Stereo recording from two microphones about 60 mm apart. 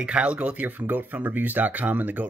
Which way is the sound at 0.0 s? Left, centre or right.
Centre.